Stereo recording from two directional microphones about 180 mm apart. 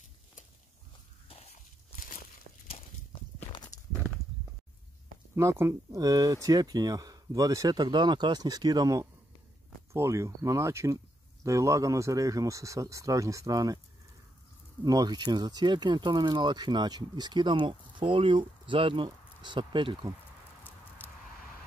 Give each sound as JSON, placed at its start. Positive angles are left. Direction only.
{"t": 1.3, "sound": "walk", "side_deg": 35}
{"t": 5.3, "sound": "speech", "side_deg": -15}
{"t": 14.9, "sound": "speech", "side_deg": -20}